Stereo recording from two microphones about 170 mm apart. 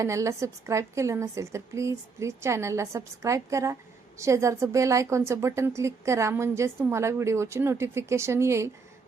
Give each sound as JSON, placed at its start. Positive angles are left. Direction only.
{"t": 0.0, "sound": "speech", "side_deg": -20}